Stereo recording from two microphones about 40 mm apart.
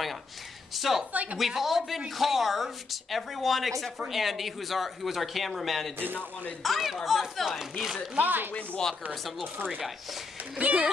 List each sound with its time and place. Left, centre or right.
0.7 s speech: centre
1.1 s speech: right
1.4 s speech: centre
8.2 s speech: right
10.5 s speech: right